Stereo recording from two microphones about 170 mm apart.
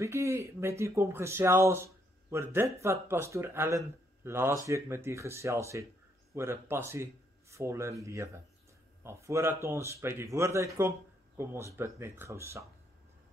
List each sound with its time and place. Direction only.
0.0 s speech: 15° right (ahead or behind)